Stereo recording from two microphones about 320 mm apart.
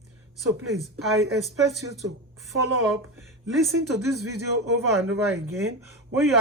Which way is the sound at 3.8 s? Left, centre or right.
Right.